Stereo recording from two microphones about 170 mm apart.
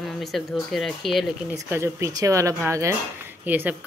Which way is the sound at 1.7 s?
15° right (ahead or behind).